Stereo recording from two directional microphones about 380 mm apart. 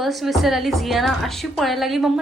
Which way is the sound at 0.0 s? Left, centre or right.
Centre.